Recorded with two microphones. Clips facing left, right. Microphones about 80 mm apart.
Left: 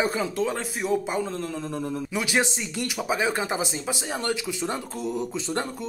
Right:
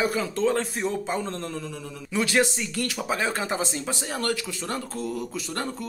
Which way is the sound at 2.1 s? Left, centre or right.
Centre.